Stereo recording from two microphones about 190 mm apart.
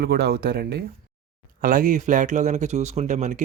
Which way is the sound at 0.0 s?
55° right (ahead or behind).